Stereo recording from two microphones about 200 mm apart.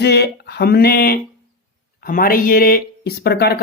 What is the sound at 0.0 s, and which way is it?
Speech, 55° left (ahead or behind).